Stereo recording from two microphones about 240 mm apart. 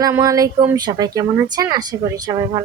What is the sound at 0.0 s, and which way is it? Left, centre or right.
Speech, centre.